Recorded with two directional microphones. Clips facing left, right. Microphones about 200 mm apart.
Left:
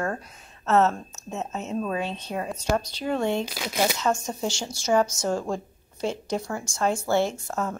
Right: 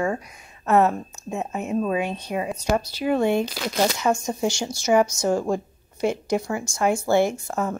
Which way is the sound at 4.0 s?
10° right (ahead or behind).